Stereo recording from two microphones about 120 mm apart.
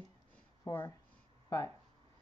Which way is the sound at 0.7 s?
30° left (ahead or behind).